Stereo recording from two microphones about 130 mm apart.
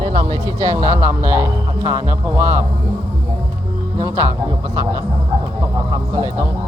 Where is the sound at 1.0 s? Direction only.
15° right (ahead or behind).